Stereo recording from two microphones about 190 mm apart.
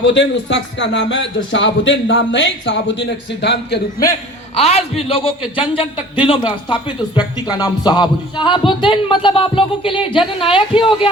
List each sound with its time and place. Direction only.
0.0 s a man's voice: 70° left (ahead or behind)
4.5 s speech: 35° left (ahead or behind)